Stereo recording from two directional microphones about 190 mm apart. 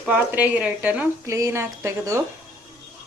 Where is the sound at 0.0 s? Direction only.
10° right (ahead or behind).